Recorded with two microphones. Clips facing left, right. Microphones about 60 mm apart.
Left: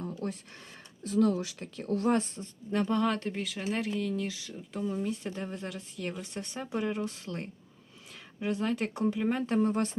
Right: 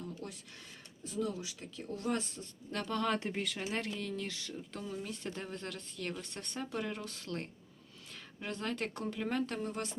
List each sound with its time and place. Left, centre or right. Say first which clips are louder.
0.0 s a sound: left 8 dB; left
1.0 s speech: left 10 dB; left
2.7 s speech: left 8 dB; centre
3.2 s speech: left 3 dB; centre
9.6 s speech: left 11 dB; left